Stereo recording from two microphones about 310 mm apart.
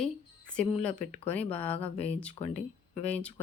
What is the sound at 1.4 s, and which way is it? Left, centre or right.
Speech, centre.